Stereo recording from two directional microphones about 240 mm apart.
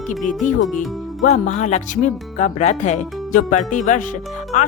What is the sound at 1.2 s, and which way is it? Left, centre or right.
Speech, left.